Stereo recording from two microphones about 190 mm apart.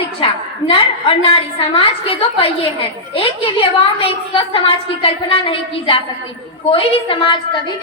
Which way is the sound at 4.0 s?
30° left (ahead or behind).